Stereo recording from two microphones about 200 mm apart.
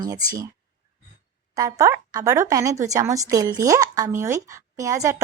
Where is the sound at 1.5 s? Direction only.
15° right (ahead or behind).